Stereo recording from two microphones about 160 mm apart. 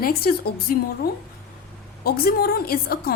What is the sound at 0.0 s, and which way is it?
A woman's voice, 70° left (ahead or behind).